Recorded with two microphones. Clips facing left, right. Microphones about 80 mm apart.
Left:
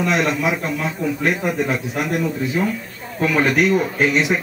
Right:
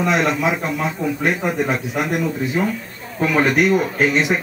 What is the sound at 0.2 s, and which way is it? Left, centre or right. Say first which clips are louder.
Speech: right 1 dB; centre.